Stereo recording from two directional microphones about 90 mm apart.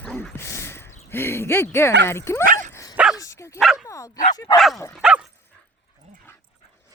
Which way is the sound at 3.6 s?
5° right (ahead or behind).